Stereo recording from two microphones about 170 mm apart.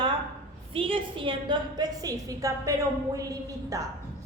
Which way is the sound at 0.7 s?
30° right (ahead or behind).